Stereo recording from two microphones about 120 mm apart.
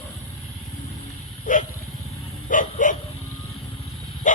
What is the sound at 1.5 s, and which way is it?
Dog, 90° left.